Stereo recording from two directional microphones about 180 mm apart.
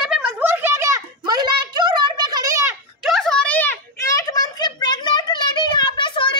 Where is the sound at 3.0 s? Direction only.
Centre (ahead or behind).